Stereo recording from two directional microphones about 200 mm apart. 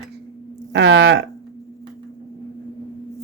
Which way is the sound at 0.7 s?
65° right (ahead or behind).